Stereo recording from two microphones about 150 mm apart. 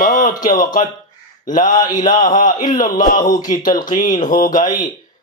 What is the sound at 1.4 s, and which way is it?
Mantra, 60° left (ahead or behind).